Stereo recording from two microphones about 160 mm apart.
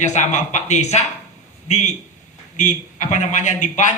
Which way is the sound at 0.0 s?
50° left (ahead or behind).